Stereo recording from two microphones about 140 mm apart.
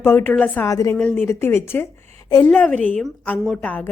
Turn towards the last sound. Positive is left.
turn(degrees=10)  # may be behind; listen again after turning